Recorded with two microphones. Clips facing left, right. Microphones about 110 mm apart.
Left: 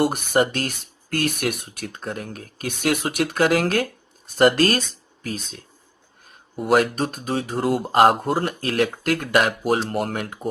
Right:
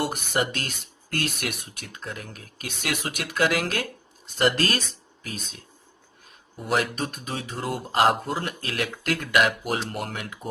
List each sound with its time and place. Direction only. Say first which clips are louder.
0.0 s speech: left 7 dB; 50° left (ahead or behind)